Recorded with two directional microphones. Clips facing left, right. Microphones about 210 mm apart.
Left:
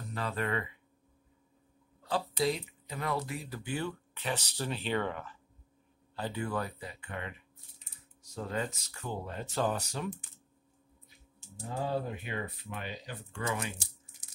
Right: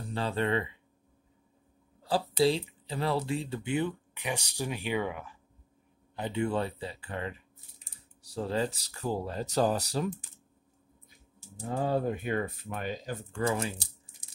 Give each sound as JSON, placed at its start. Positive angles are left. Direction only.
{"t": 0.0, "sound": "speech", "side_deg": -30}
{"t": 2.0, "sound": "speech", "side_deg": -30}
{"t": 6.1, "sound": "speech", "side_deg": -20}
{"t": 11.8, "sound": "speech", "side_deg": -50}